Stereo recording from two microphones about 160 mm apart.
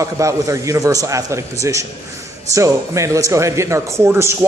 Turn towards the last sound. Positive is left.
turn(degrees=-15)  # may be behind; listen again after turning